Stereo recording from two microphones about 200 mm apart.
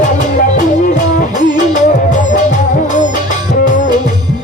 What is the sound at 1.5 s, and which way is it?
Music, 40° left (ahead or behind).